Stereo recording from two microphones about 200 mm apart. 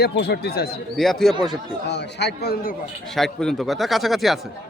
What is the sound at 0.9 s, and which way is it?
Speech, centre (ahead or behind).